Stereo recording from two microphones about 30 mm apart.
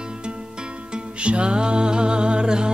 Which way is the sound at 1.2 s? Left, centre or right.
Right.